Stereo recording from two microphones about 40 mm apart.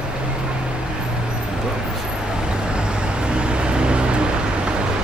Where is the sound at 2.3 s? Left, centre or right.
Right.